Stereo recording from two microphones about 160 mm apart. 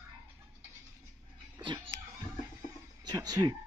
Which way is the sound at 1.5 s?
25° right (ahead or behind).